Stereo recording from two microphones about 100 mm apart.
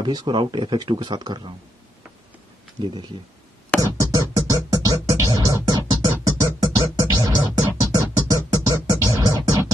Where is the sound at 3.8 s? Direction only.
35° right (ahead or behind).